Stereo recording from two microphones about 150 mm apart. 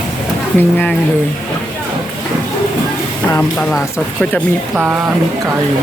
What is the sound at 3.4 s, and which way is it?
Speech, 5° left (ahead or behind).